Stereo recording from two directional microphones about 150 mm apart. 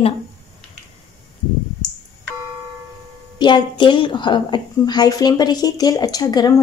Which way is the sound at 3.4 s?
30° left (ahead or behind).